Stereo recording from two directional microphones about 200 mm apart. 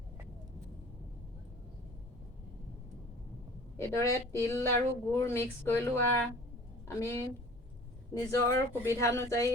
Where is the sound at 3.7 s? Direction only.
15° left (ahead or behind).